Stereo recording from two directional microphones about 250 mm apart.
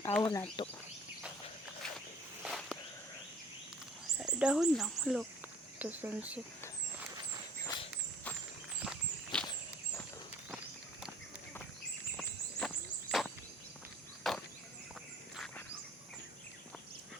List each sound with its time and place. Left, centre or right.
0.0 s speech: centre
0.6 s speech: centre
2.4 s a sound: centre
4.2 s speech: centre
8.8 s walk: centre
12.1 s a sound: centre
14.3 s chop: centre